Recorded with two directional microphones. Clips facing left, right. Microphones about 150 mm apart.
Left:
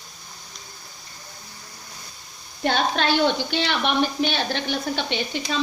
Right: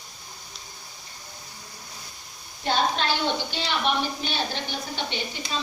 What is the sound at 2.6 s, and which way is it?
A woman's voice, 65° left (ahead or behind).